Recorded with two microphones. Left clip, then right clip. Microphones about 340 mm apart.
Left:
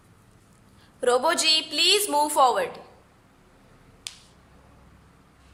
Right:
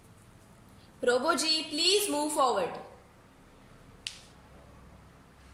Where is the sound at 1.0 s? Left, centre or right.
Left.